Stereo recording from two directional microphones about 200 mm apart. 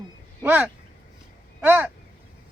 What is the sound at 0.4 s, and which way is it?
Speech, 10° right (ahead or behind).